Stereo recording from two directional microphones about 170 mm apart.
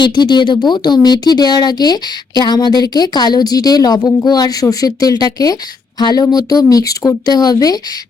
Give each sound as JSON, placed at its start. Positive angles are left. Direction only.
{"t": 0.0, "sound": "speech", "side_deg": 25}